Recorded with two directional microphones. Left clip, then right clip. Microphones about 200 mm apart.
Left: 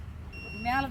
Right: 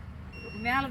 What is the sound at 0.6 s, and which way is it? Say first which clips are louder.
Speech: right 1 dB; 20° left (ahead or behind).